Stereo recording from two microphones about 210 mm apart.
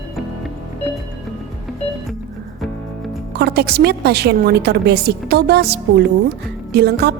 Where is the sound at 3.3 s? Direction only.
50° right (ahead or behind).